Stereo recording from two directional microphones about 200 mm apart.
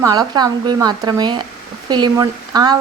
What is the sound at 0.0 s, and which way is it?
A woman's voice, 20° right (ahead or behind).